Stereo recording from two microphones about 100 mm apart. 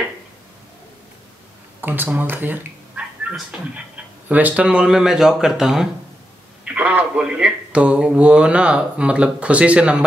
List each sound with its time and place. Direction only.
1.8 s cat: 20° right (ahead or behind)
3.3 s speech: 10° right (ahead or behind)